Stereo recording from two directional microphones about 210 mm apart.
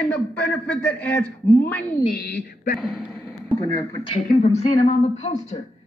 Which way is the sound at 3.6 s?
15° left (ahead or behind).